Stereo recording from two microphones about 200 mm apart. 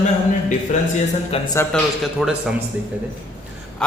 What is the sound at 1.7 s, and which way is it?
Speech, centre (ahead or behind).